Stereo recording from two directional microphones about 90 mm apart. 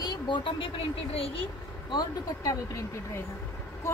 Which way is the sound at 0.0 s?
50° left (ahead or behind).